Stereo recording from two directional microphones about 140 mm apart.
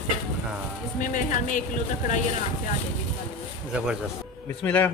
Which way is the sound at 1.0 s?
70° left (ahead or behind).